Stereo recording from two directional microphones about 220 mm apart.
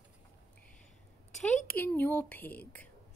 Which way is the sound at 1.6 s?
10° left (ahead or behind).